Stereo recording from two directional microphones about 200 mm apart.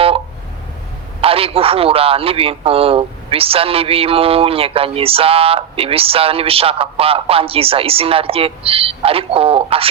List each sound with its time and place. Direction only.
1.2 s a man's voice: 30° right (ahead or behind)